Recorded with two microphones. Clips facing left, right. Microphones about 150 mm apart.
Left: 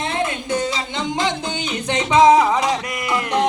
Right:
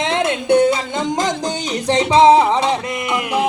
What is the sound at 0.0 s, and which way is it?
Music, 85° right.